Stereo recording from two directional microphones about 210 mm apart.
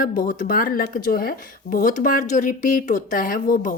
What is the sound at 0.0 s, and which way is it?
Speech, 40° left (ahead or behind).